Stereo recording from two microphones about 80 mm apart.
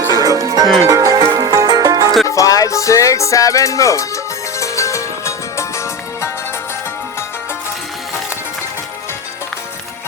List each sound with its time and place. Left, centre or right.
0.1 s music: right
2.2 s music: left